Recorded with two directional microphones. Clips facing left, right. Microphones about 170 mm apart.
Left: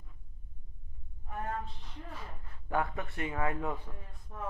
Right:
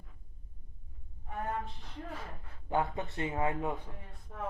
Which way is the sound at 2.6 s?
25° right (ahead or behind).